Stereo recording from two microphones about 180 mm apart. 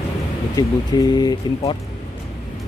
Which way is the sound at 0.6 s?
20° left (ahead or behind).